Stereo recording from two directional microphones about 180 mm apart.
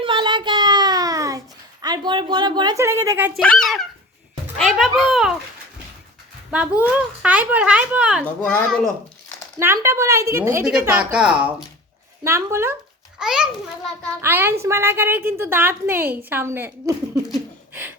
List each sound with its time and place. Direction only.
0.0 s a sound: 25° right (ahead or behind)
1.8 s speech: 25° right (ahead or behind)
3.3 s speech: 5° left (ahead or behind)
6.5 s a woman's voice: 10° right (ahead or behind)
8.2 s speech: 10° left (ahead or behind)
9.6 s a woman's voice: 15° right (ahead or behind)
13.1 s a child's voice: 5° right (ahead or behind)